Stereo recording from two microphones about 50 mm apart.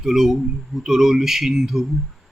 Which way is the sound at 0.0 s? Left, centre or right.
Centre.